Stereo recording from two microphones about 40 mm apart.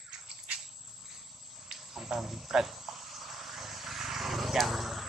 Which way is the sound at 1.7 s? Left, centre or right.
Centre.